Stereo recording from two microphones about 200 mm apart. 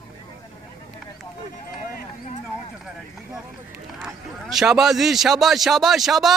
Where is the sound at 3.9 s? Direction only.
5° right (ahead or behind).